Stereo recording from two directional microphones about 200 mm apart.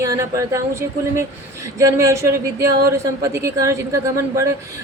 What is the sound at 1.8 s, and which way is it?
Speech, 15° right (ahead or behind).